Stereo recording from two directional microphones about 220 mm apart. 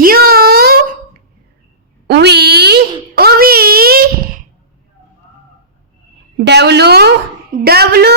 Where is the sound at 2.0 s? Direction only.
50° right (ahead or behind).